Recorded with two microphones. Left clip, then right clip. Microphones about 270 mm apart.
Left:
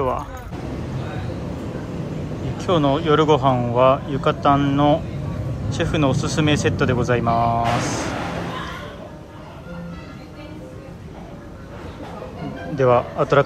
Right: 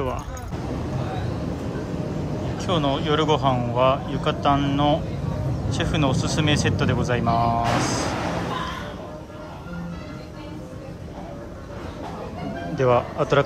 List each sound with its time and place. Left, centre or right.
2.5 s speech: centre
12.7 s speech: centre